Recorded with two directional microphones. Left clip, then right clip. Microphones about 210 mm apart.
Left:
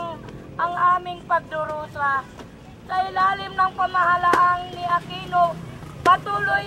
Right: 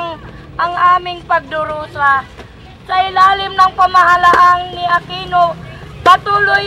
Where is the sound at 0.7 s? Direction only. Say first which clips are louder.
Right 9 dB; 20° right (ahead or behind).